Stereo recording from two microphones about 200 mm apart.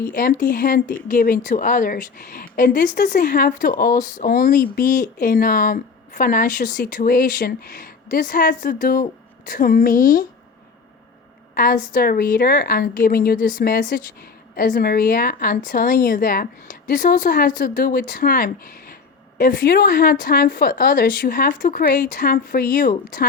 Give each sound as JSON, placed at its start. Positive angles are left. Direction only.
{"t": 0.1, "sound": "speech", "side_deg": 45}
{"t": 11.5, "sound": "speech", "side_deg": 45}